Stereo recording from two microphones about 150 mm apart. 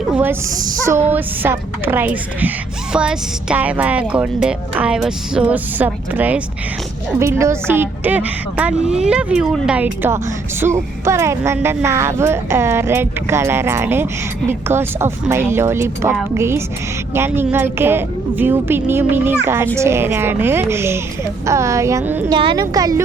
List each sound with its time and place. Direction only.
0.1 s a woman's voice: 10° right (ahead or behind)
22.3 s a woman's voice: 30° right (ahead or behind)